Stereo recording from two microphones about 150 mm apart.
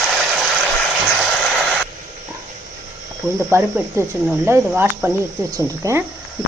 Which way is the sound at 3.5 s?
15° right (ahead or behind).